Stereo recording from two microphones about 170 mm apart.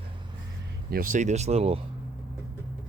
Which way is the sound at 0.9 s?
55° right (ahead or behind).